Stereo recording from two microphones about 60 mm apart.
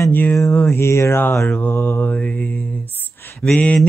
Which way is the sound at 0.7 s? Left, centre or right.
Left.